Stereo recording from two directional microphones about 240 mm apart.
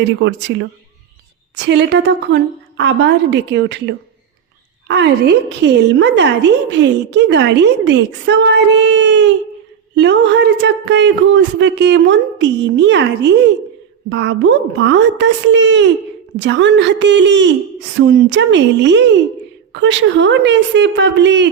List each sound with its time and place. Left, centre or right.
0.2 s a woman's voice: right